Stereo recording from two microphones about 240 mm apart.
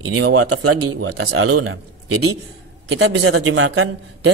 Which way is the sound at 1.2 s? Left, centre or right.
Right.